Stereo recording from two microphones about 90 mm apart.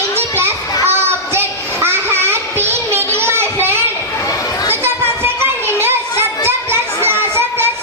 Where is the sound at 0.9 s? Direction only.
25° right (ahead or behind).